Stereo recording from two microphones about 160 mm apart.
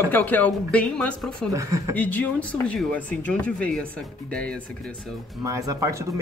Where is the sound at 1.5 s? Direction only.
20° right (ahead or behind).